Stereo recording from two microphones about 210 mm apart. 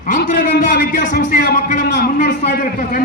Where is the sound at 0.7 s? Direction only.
40° left (ahead or behind).